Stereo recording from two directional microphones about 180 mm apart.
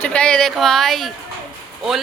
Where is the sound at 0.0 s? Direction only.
5° left (ahead or behind).